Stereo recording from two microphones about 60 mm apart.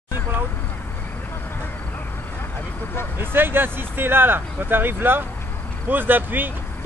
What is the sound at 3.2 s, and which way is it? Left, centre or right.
Speech, right.